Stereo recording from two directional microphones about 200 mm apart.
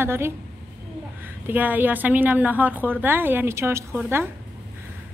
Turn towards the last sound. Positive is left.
turn(degrees=-15)  # may be behind; listen again after turning